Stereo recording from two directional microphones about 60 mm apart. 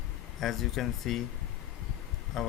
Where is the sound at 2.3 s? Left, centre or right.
Centre.